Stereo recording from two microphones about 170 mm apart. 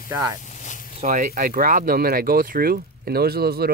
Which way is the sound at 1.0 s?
50° right (ahead or behind).